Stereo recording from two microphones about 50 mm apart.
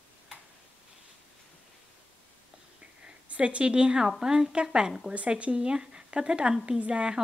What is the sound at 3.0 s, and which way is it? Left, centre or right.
A woman's voice, right.